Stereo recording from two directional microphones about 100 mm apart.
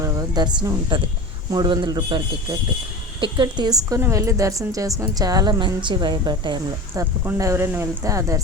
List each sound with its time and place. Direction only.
0.0 s a sound: 40° right (ahead or behind)
0.9 s a woman's voice: 50° right (ahead or behind)
6.9 s a woman's voice: 20° right (ahead or behind)